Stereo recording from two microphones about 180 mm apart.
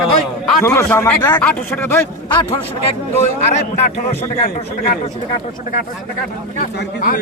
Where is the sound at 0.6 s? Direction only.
15° left (ahead or behind).